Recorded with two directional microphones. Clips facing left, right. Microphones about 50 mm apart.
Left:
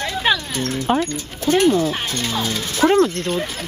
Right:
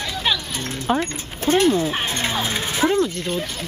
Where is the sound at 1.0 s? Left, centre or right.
Right.